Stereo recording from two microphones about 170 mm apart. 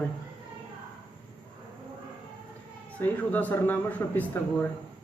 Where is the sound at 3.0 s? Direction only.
10° left (ahead or behind).